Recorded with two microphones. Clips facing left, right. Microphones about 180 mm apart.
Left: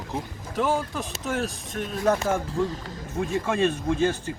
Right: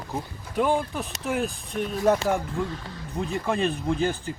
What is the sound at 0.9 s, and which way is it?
Speech, centre (ahead or behind).